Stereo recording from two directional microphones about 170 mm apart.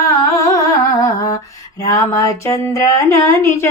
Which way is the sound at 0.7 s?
20° left (ahead or behind).